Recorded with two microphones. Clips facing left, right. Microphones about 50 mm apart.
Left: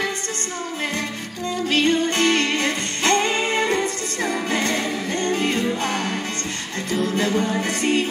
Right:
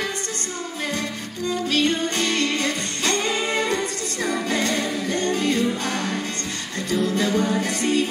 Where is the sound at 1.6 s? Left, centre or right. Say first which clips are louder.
Left 4 dB; left.